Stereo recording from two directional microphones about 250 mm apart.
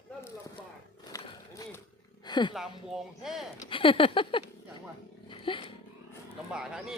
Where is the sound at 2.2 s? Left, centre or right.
Centre.